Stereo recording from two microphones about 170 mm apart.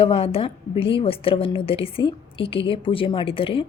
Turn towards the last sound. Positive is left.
turn(degrees=30)  # may be behind; listen again after turning